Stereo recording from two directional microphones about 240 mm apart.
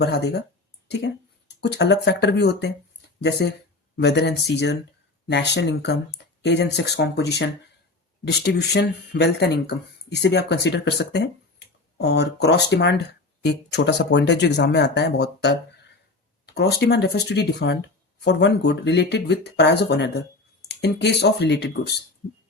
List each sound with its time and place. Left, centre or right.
0.0 s speech: left
16.6 s speech: left